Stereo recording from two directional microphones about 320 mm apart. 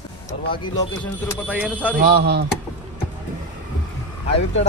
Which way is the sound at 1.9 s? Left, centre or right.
Right.